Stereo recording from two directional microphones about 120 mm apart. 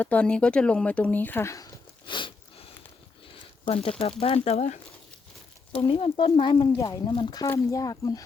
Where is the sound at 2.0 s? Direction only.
45° left (ahead or behind).